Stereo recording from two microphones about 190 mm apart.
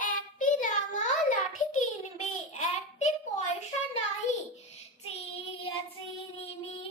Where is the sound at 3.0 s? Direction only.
35° left (ahead or behind).